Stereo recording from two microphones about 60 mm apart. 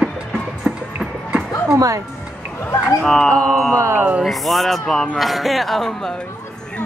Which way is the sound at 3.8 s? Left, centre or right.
Right.